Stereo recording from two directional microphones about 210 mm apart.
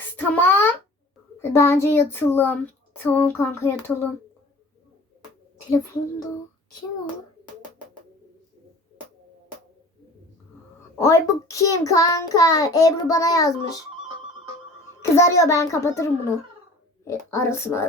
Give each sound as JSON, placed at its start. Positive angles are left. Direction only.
{"t": 0.2, "sound": "a sound", "side_deg": 10}
{"t": 1.4, "sound": "a child's voice", "side_deg": 10}
{"t": 10.9, "sound": "a child's voice", "side_deg": 15}
{"t": 15.1, "sound": "a child's voice", "side_deg": 15}
{"t": 17.1, "sound": "a child's voice", "side_deg": 15}